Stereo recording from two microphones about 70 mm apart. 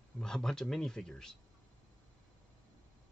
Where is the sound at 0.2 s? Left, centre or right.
Centre.